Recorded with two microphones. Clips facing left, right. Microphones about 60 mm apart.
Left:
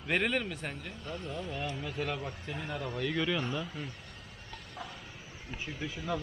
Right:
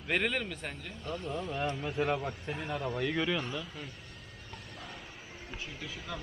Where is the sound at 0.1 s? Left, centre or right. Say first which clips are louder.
Left 1 dB; centre.